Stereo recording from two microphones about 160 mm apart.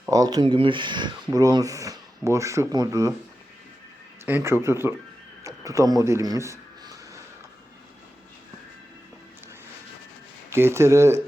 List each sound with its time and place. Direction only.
0.0 s speech: 20° right (ahead or behind)
4.3 s speech: 15° right (ahead or behind)
5.4 s a sound: 20° right (ahead or behind)
10.5 s speech: 15° right (ahead or behind)